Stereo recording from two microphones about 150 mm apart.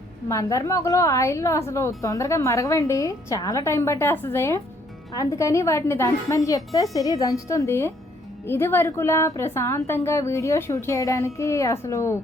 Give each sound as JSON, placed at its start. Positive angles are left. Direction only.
{"t": 0.3, "sound": "a woman's voice", "side_deg": 20}